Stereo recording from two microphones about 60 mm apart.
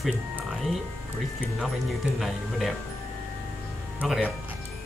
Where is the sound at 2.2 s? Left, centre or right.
Centre.